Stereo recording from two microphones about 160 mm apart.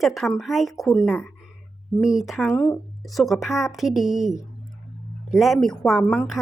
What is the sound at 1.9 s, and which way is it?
Speech, 5° right (ahead or behind).